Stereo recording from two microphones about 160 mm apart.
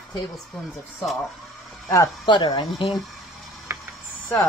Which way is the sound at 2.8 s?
Centre (ahead or behind).